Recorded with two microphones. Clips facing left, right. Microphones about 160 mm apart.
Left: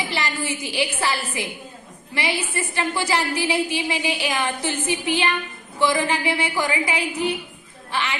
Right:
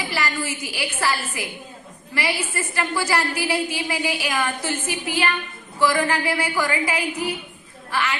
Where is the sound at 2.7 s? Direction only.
20° left (ahead or behind).